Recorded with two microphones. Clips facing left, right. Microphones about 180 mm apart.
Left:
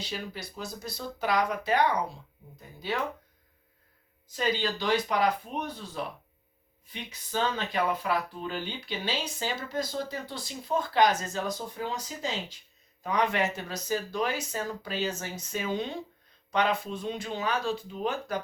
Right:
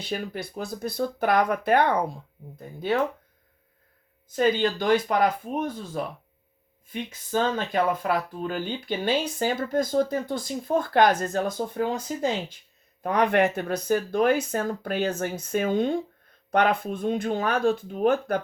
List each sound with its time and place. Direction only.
0.0 s speech: 55° right (ahead or behind)
4.3 s speech: 55° right (ahead or behind)